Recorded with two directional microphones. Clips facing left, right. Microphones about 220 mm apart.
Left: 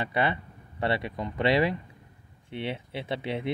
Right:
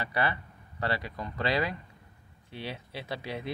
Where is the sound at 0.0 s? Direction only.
20° left (ahead or behind).